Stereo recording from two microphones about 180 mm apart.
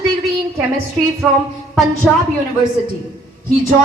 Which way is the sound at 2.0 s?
Centre (ahead or behind).